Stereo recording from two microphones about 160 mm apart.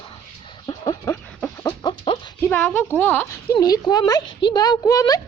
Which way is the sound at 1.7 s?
30° left (ahead or behind).